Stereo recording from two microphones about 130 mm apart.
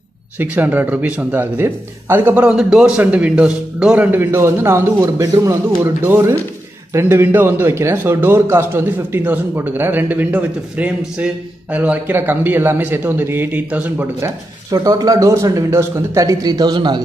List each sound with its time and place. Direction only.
0.4 s a man's voice: 15° right (ahead or behind)
14.7 s speech: 30° right (ahead or behind)